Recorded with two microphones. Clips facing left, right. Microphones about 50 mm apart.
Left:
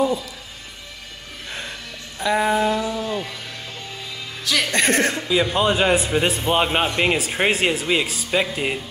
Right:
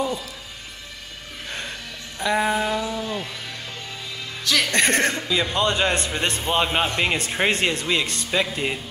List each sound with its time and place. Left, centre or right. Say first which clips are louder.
1.5 s a sound: even; centre
3.1 s music: left 3 dB; centre
4.5 s a man's voice: left 1 dB; centre